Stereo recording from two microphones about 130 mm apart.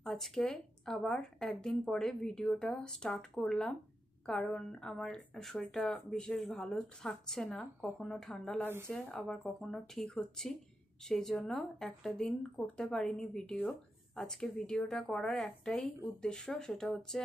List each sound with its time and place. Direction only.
0.0 s a woman's voice: 5° left (ahead or behind)